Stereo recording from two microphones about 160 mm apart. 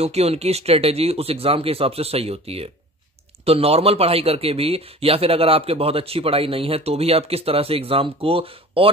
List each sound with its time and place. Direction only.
0.0 s speech: 40° right (ahead or behind)